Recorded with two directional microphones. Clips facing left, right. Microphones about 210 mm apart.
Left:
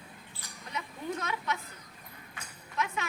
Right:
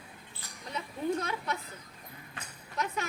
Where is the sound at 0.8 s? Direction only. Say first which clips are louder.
Right 4 dB; 35° right (ahead or behind).